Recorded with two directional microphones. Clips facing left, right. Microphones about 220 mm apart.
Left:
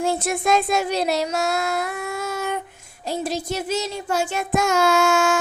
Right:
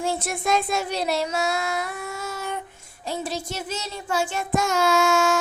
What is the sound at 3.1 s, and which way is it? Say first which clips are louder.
Female singing: left 4 dB; 40° left (ahead or behind).